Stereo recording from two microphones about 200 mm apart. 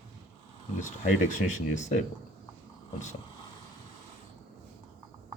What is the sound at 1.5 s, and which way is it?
Speech, 40° left (ahead or behind).